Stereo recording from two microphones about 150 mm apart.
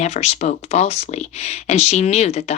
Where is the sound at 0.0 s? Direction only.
45° left (ahead or behind).